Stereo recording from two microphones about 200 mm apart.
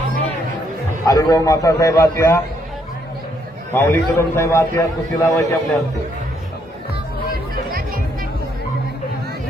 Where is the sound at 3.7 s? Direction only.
10° left (ahead or behind).